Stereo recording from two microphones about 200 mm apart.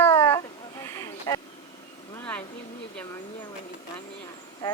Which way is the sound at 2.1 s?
5° left (ahead or behind).